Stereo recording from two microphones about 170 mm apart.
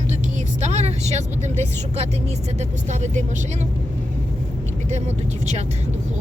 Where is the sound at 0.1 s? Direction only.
45° right (ahead or behind).